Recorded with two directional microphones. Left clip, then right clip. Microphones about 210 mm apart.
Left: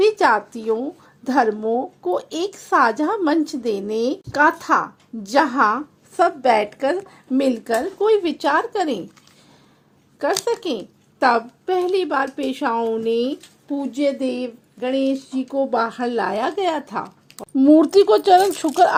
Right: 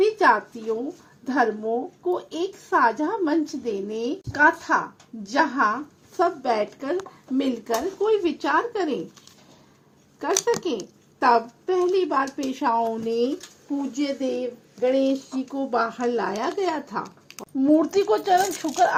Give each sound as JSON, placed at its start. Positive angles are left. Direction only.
{"t": 0.0, "sound": "a woman's voice", "side_deg": 55}
{"t": 10.4, "sound": "speech", "side_deg": 55}